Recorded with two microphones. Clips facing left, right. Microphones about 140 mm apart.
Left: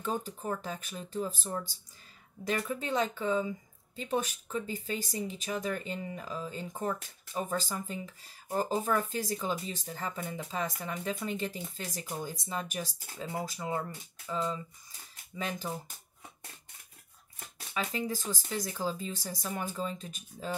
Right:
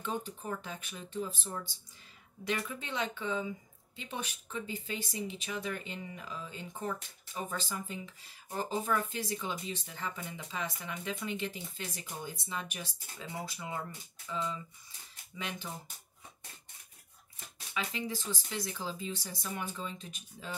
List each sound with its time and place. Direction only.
0.0 s speech: 40° left (ahead or behind)
17.7 s speech: 40° left (ahead or behind)